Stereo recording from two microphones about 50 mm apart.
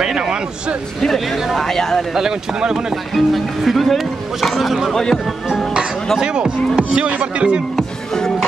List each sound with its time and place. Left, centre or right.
0.0 s a sound: centre
1.0 s speech: centre
2.1 s speech: centre
3.2 s speech: centre
4.9 s speech: centre
6.1 s speech: centre
7.7 s music: centre